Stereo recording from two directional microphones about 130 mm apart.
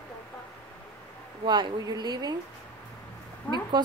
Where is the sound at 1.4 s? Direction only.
35° right (ahead or behind).